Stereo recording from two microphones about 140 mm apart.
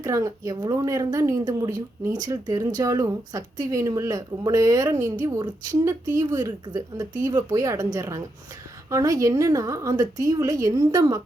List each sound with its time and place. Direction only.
0.0 s speech: 20° right (ahead or behind)